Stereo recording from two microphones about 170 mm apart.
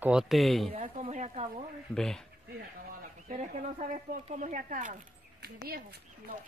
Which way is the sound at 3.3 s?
40° right (ahead or behind).